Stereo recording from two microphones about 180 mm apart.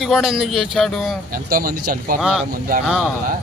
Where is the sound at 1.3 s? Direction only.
55° right (ahead or behind).